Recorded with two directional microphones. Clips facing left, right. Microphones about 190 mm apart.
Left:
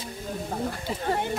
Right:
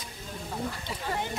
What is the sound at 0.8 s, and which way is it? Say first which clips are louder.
Speech: left 6 dB; 45° left (ahead or behind).